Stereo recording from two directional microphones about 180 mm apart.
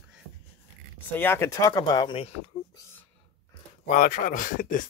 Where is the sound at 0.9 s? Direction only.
10° left (ahead or behind); by 2.5 s 30° left (ahead or behind).